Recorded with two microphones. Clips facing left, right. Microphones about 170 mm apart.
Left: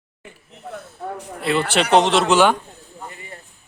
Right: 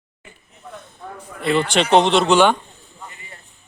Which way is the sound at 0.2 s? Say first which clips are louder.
Left 4 dB; 65° left (ahead or behind).